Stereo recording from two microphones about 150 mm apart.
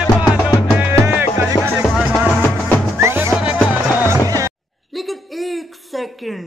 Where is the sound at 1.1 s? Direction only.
15° right (ahead or behind).